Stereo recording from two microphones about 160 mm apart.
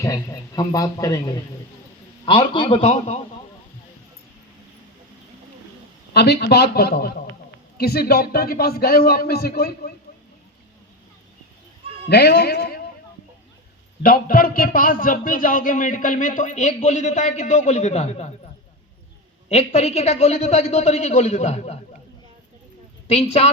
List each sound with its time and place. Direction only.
0.0 s a man's voice: 20° left (ahead or behind)
2.8 s a woman's voice: 45° left (ahead or behind)
6.1 s a man's voice: 90° left
12.0 s a man's voice: 90° left
14.0 s a man's voice: 65° left (ahead or behind); by 18.3 s 40° left (ahead or behind)
19.5 s a woman's voice: 40° left (ahead or behind)
23.0 s a woman's voice: 45° left (ahead or behind)